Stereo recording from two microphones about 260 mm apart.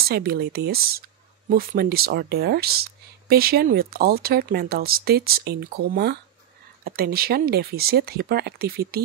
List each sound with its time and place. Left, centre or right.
0.0 s speech: right